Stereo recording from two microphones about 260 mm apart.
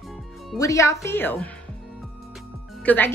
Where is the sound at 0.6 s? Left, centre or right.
Centre.